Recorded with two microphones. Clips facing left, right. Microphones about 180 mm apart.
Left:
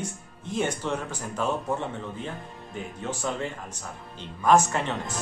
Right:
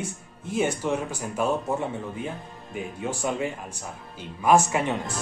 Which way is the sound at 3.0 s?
10° right (ahead or behind).